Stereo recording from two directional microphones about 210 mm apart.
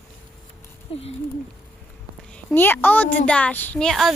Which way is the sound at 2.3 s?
10° left (ahead or behind).